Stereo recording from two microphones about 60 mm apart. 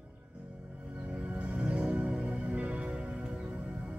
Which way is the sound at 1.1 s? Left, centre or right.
Right.